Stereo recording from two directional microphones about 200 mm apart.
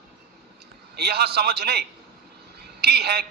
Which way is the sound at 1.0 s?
55° right (ahead or behind).